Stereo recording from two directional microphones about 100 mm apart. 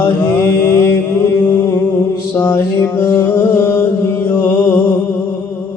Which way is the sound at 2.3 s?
20° left (ahead or behind).